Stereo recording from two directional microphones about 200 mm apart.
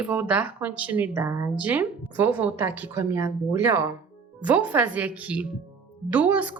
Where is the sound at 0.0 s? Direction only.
5° right (ahead or behind).